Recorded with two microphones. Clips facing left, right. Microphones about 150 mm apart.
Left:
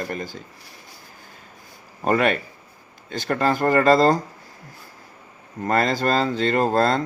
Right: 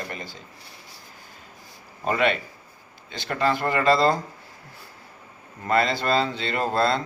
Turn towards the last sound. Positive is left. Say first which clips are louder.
# left 4 dB
turn(degrees=45)  # may be behind; listen again after turning